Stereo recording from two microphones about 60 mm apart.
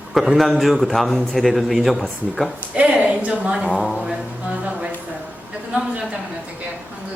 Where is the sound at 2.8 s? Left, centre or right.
Right.